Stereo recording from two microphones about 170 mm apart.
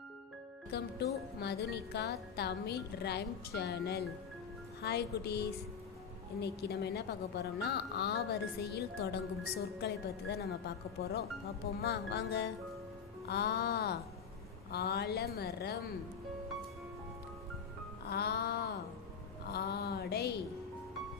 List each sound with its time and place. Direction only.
0.7 s a woman's voice: 80° left
13.2 s a woman's voice: 70° left (ahead or behind)
18.1 s music: 65° left (ahead or behind)
19.5 s a sound: 70° left (ahead or behind)